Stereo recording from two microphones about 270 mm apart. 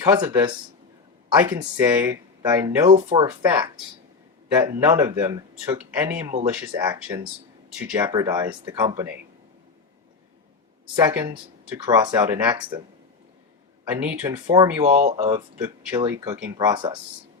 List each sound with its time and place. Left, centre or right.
0.0 s speech: centre
1.3 s speech: centre
4.8 s speech: centre
10.9 s speech: centre
13.8 s speech: centre
14.8 s speech: right
15.6 s speech: centre